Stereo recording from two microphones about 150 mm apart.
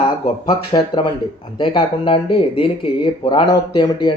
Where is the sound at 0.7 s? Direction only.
35° left (ahead or behind).